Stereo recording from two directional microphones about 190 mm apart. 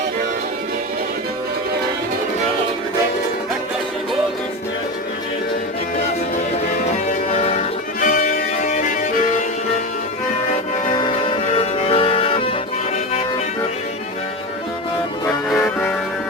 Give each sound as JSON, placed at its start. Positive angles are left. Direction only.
{"t": 7.1, "sound": "music", "side_deg": 35}
{"t": 8.0, "sound": "music", "side_deg": 45}
{"t": 10.9, "sound": "music", "side_deg": 25}
{"t": 15.5, "sound": "music", "side_deg": 5}